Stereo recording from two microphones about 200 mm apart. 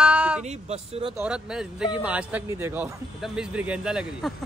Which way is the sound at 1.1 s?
5° right (ahead or behind).